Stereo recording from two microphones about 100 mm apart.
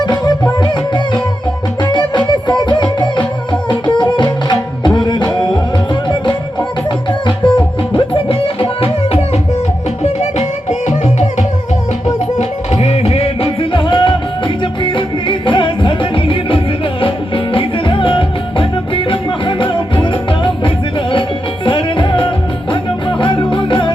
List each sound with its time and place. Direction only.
0.0 s music: 45° left (ahead or behind); by 10.4 s 90° left
12.4 s music: 90° left; by 23.9 s 55° left (ahead or behind)